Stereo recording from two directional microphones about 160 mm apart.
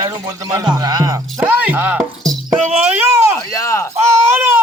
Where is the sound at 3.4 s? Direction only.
20° left (ahead or behind).